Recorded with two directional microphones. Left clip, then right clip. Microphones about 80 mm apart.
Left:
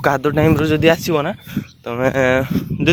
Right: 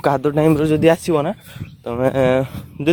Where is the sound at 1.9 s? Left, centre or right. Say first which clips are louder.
Left 1 dB; centre.